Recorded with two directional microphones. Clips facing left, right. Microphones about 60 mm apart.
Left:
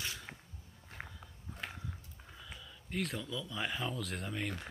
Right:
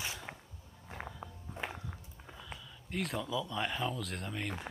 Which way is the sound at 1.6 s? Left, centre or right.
Centre.